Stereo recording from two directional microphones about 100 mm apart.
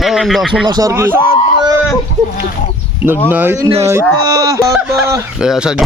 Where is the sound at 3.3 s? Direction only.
20° right (ahead or behind).